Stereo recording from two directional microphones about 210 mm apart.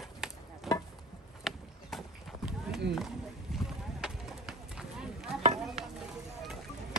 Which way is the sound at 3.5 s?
Centre (ahead or behind).